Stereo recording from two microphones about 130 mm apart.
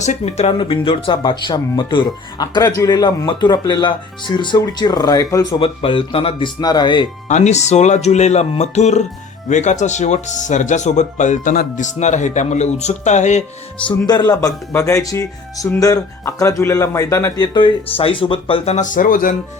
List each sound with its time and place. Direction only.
0.0 s speech: 60° left (ahead or behind)
0.6 s speech: 45° left (ahead or behind)
5.5 s speech: 45° left (ahead or behind)
6.6 s speech: 30° left (ahead or behind)
7.3 s speech: 65° left (ahead or behind)
14.1 s speech: 30° left (ahead or behind)
17.4 s speech: 40° left (ahead or behind); by 19.4 s 90° left